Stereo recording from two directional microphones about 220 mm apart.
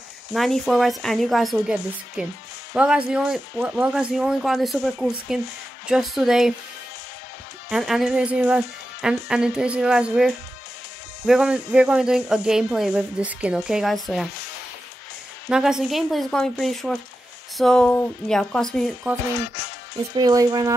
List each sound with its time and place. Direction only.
0.3 s speech: centre (ahead or behind)
7.7 s speech: centre (ahead or behind)
15.5 s speech: centre (ahead or behind)
20.2 s speech: 15° right (ahead or behind)